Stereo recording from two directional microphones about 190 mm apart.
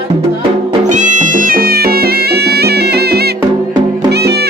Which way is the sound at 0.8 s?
40° right (ahead or behind).